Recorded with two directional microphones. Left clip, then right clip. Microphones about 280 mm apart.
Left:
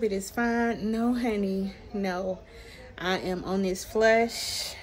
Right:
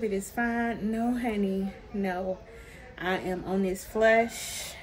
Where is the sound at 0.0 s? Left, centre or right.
Centre.